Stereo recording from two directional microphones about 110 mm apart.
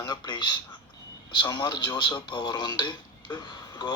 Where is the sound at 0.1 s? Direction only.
45° left (ahead or behind).